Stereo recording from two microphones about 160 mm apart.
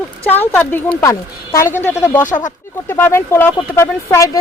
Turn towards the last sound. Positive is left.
turn(degrees=20)  # may be behind; listen again after turning